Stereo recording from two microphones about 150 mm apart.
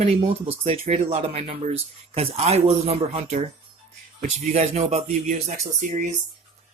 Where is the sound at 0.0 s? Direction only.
45° right (ahead or behind).